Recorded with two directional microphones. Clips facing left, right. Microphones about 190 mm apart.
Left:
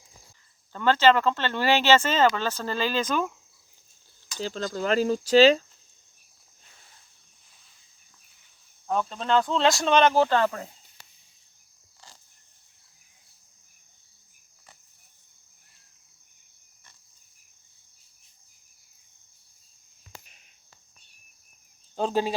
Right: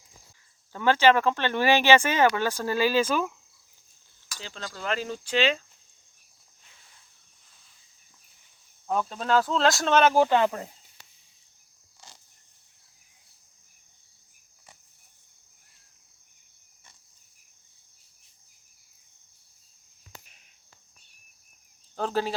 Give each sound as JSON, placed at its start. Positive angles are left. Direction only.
{"t": 0.7, "sound": "speech", "side_deg": -10}
{"t": 4.4, "sound": "speech", "side_deg": 40}
{"t": 8.9, "sound": "speech", "side_deg": -5}
{"t": 21.9, "sound": "speech", "side_deg": 15}